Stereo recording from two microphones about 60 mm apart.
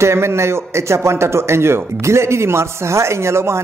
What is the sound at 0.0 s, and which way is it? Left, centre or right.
A man's voice, right.